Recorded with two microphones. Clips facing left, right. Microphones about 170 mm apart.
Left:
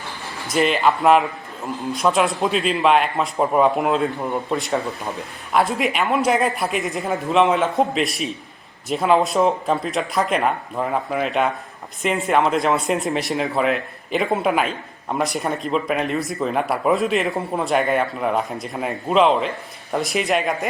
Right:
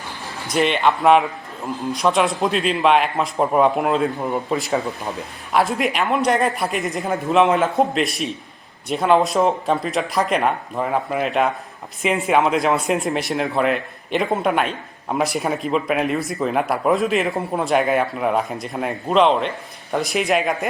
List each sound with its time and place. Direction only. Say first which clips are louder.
0.5 s speech: even; centre (ahead or behind)